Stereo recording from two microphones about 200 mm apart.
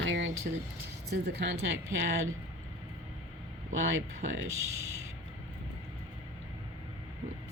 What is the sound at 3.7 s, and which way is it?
Speech, 75° right (ahead or behind).